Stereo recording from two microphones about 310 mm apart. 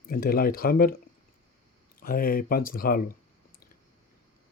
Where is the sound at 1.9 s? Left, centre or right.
Left.